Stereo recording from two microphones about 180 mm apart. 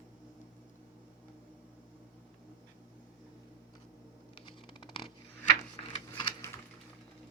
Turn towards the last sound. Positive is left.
turn(degrees=25)  # may be behind; listen again after turning